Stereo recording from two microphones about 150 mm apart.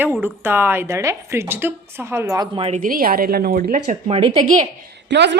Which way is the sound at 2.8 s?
75° right (ahead or behind).